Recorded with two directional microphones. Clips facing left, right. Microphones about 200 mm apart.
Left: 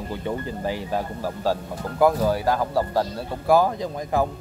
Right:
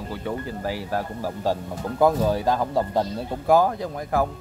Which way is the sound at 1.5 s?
15° right (ahead or behind).